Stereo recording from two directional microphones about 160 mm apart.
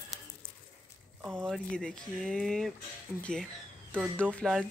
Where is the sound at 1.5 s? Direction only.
5° left (ahead or behind).